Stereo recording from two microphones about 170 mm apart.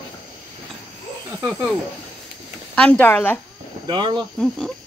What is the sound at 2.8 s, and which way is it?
Speech, 10° left (ahead or behind).